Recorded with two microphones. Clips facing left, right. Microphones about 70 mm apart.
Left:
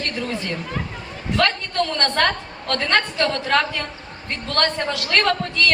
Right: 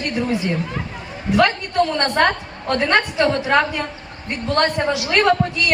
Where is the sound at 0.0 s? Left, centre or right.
Centre.